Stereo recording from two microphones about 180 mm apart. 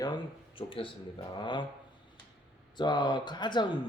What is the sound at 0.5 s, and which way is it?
Speech, 30° left (ahead or behind).